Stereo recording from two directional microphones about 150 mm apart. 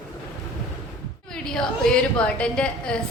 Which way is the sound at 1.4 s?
5° left (ahead or behind).